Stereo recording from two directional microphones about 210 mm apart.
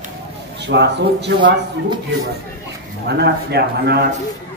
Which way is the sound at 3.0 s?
50° right (ahead or behind).